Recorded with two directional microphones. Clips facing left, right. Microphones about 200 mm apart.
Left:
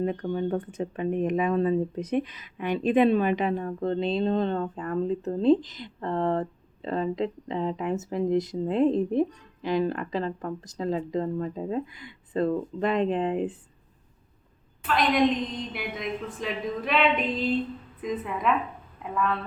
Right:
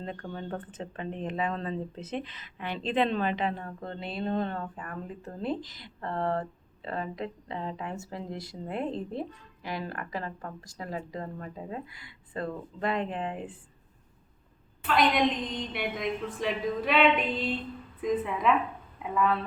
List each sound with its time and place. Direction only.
0.0 s speech: 15° left (ahead or behind)
14.8 s a woman's voice: centre (ahead or behind)